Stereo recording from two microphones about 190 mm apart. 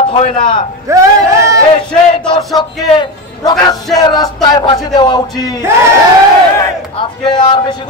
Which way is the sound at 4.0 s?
20° left (ahead or behind).